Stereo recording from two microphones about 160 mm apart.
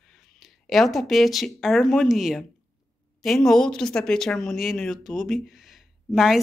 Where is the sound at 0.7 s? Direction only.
Centre (ahead or behind).